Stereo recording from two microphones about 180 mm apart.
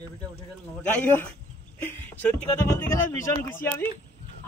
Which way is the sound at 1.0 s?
10° left (ahead or behind).